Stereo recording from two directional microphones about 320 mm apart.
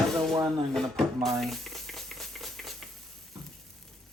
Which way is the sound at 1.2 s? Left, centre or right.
Centre.